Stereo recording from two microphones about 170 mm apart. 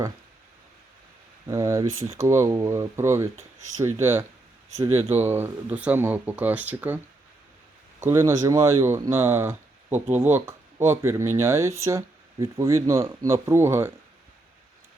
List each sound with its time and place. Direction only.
1.5 s speech: 20° right (ahead or behind)
8.0 s speech: 15° right (ahead or behind)